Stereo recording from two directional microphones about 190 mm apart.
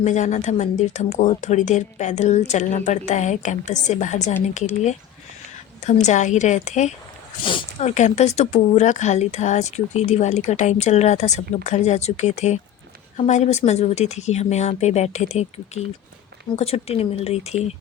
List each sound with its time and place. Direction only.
0.0 s speech: 40° left (ahead or behind)